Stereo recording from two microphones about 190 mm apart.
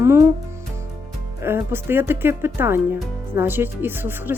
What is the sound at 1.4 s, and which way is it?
Speech, 10° right (ahead or behind).